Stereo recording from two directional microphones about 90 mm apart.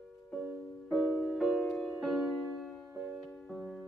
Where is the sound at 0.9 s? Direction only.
5° right (ahead or behind).